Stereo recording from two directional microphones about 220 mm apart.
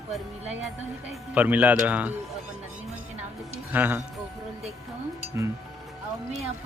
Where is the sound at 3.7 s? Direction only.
10° right (ahead or behind).